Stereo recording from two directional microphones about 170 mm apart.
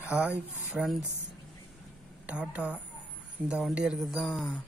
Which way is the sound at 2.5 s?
5° right (ahead or behind).